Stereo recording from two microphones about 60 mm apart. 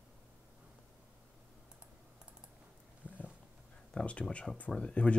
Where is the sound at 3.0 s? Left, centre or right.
Left.